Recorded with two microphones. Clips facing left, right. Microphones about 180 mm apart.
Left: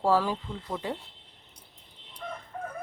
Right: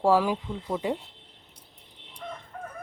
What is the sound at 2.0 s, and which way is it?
Crowing, 65° right (ahead or behind).